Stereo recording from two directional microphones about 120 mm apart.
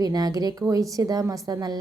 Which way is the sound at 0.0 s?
30° right (ahead or behind).